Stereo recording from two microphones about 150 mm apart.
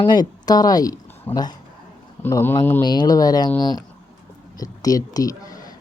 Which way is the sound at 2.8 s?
30° left (ahead or behind).